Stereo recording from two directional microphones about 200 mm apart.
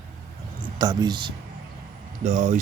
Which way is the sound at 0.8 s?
20° right (ahead or behind).